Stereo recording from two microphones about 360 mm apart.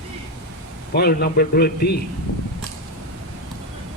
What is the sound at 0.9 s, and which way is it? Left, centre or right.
Speech, left.